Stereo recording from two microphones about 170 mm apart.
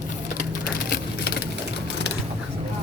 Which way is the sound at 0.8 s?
70° left (ahead or behind).